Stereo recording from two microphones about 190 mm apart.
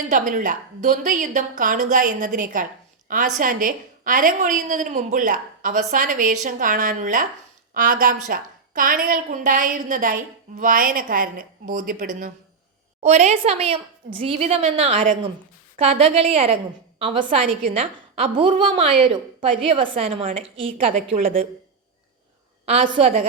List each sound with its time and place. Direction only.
0.1 s a woman's voice: 45° right (ahead or behind)
17.2 s a woman's voice: 40° right (ahead or behind)
17.7 s a woman's voice: 30° right (ahead or behind)
22.6 s a woman's voice: 30° right (ahead or behind)